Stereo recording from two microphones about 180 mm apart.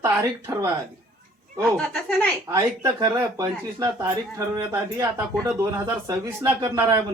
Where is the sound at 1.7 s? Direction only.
5° left (ahead or behind).